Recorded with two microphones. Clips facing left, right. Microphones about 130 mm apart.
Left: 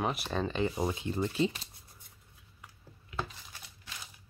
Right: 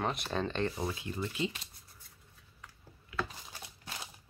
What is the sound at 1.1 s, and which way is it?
Speech, 35° left (ahead or behind).